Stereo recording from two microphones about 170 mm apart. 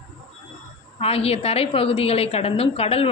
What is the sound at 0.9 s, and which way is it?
A woman's voice, 35° left (ahead or behind).